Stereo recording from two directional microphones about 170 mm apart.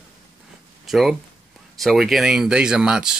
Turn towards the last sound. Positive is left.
turn(degrees=-5)  # may be behind; listen again after turning